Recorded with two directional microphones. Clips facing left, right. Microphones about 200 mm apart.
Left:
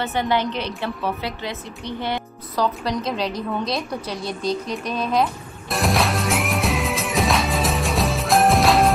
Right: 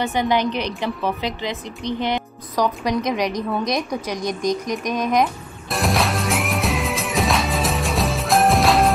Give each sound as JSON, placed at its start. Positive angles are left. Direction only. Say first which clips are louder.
{"t": 0.0, "sound": "a woman's voice", "louder": "right 2 dB", "side_deg": -15}
{"t": 5.7, "sound": "music", "louder": "even", "side_deg": 0}